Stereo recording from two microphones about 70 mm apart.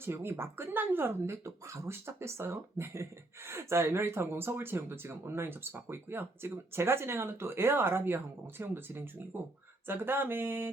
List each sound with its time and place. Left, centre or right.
0.0 s speech: right